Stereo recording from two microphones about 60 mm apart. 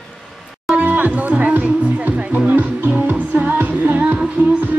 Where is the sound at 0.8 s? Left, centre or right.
Right.